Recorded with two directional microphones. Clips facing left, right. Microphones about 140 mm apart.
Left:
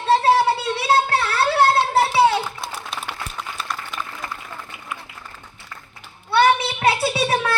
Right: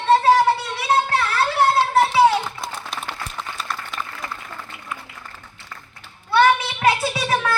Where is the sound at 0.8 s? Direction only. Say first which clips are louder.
Left 1 dB; 30° left (ahead or behind).